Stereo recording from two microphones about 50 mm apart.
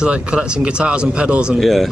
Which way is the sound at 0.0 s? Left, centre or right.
Centre.